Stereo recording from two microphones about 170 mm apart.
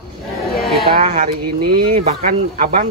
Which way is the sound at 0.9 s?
45° right (ahead or behind).